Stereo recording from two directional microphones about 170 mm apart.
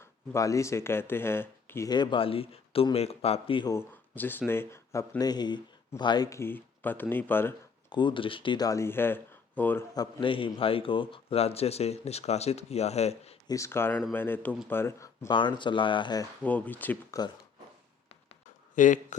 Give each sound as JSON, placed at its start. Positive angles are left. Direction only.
{"t": 0.0, "sound": "speech", "side_deg": 20}
{"t": 1.9, "sound": "a man's voice", "side_deg": 25}
{"t": 3.7, "sound": "speech", "side_deg": 15}
{"t": 7.9, "sound": "speech", "side_deg": 25}
{"t": 9.9, "sound": "a man's voice", "side_deg": 25}
{"t": 13.5, "sound": "speech", "side_deg": 15}
{"t": 16.4, "sound": "speech", "side_deg": 10}
{"t": 18.7, "sound": "speech", "side_deg": 50}